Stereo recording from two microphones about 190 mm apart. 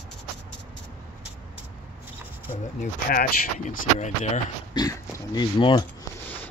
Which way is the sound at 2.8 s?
45° left (ahead or behind).